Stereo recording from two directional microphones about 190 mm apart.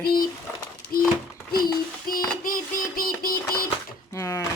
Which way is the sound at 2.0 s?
50° left (ahead or behind).